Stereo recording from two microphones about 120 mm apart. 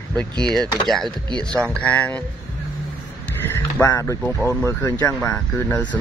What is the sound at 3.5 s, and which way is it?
Speech, 20° left (ahead or behind).